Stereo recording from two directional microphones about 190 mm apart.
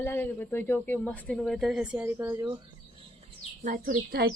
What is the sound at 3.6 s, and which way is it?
Speech, 40° right (ahead or behind).